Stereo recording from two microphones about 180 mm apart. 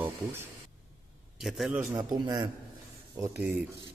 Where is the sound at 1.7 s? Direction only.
20° right (ahead or behind).